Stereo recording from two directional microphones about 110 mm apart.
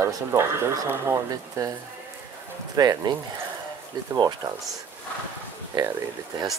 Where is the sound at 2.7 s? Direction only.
35° right (ahead or behind).